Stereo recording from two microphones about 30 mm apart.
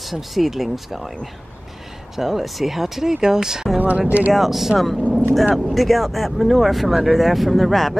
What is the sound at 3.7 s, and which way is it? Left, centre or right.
Speech, right.